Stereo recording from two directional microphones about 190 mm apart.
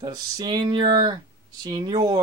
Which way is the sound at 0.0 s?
20° right (ahead or behind).